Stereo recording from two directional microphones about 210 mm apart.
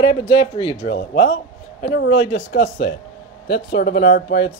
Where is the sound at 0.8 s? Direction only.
55° left (ahead or behind).